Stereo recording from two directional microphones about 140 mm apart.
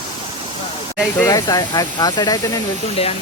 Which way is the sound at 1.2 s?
25° left (ahead or behind).